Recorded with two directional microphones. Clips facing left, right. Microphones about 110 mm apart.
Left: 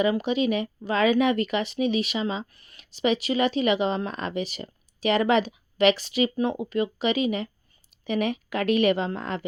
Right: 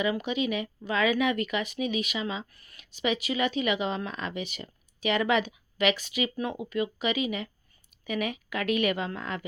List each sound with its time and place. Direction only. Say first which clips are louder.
0.0 s speech: left 5 dB; 35° left (ahead or behind)